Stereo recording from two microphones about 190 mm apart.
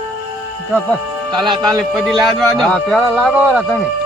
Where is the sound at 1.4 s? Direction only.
20° right (ahead or behind).